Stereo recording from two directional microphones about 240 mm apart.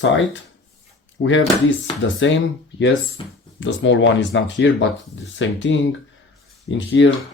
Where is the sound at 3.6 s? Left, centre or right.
Left.